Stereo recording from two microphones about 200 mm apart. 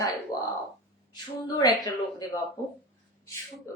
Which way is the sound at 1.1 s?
20° left (ahead or behind).